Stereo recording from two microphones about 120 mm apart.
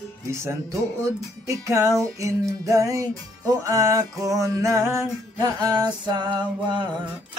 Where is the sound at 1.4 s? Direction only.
25° right (ahead or behind); by 7.1 s 40° right (ahead or behind).